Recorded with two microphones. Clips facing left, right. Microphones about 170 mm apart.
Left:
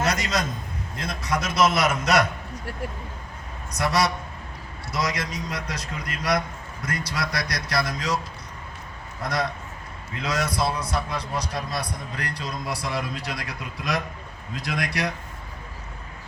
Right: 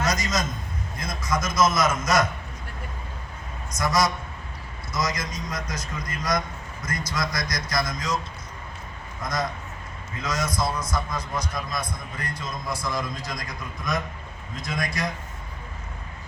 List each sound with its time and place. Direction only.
0.0 s a sound: 65° left (ahead or behind)
0.9 s a man's voice: 65° left (ahead or behind)
3.8 s a man's voice: 65° left (ahead or behind)
9.2 s a man's voice: 65° left (ahead or behind)
11.3 s a man's voice: 35° left (ahead or behind)
12.1 s a man's voice: 70° left (ahead or behind)